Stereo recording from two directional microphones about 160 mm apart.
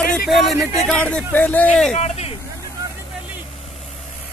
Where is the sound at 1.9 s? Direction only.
45° left (ahead or behind).